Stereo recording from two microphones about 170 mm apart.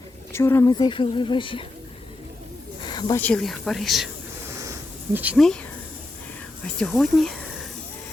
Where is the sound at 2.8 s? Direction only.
25° left (ahead or behind).